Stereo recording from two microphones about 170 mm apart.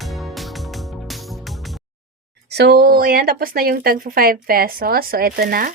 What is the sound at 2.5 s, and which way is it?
Speech, 75° right (ahead or behind).